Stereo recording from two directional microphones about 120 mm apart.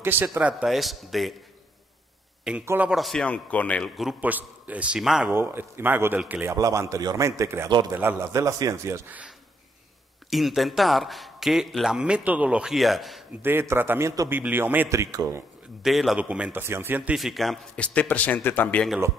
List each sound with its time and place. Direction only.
0.0 s a man's voice: 20° right (ahead or behind); by 1.3 s centre (ahead or behind)
2.6 s a man's voice: 20° right (ahead or behind)
2.9 s a man's voice: centre (ahead or behind)
3.9 s speech: centre (ahead or behind)
4.2 s a man's voice: 15° right (ahead or behind)
5.3 s a man's voice: 20° right (ahead or behind)
6.5 s a man's voice: 25° right (ahead or behind)
10.3 s speech: centre (ahead or behind)
13.4 s a man's voice: 20° right (ahead or behind)
15.8 s a man's voice: centre (ahead or behind); by 17.1 s 15° right (ahead or behind)
17.1 s a man's voice: centre (ahead or behind)